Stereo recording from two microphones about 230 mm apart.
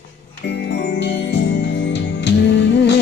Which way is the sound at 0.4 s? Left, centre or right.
Left.